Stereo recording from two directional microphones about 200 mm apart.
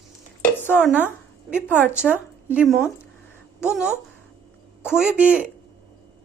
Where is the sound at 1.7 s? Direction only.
10° left (ahead or behind).